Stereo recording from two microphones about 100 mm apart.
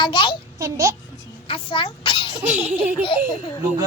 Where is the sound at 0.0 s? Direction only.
55° left (ahead or behind).